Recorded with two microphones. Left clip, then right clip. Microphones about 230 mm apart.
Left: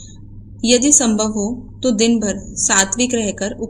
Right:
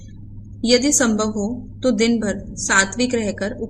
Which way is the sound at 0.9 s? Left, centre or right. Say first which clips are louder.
Left 3 dB; centre.